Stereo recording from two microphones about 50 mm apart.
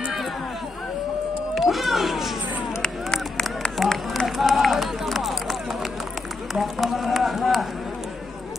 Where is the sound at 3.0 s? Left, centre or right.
Centre.